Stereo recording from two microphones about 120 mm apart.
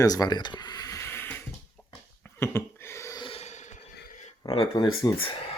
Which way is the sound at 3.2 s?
50° left (ahead or behind).